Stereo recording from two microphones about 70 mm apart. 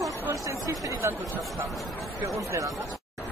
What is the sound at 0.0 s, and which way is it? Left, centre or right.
Chatter, right.